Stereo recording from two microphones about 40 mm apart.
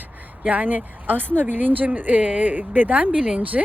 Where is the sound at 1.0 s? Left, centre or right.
Right.